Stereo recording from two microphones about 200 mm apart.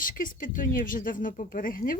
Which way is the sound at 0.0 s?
45° left (ahead or behind).